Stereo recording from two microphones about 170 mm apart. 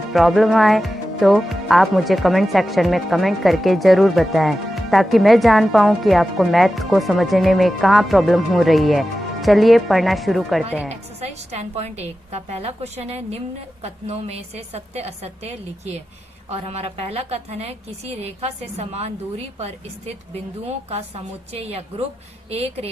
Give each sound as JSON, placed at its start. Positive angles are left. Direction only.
{"t": 0.1, "sound": "speech", "side_deg": 0}
{"t": 10.8, "sound": "a woman's voice", "side_deg": -40}
{"t": 21.5, "sound": "a woman's voice", "side_deg": -35}